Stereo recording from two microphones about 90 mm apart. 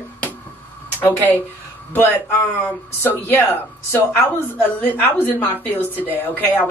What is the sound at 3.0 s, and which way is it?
Speech, 25° left (ahead or behind).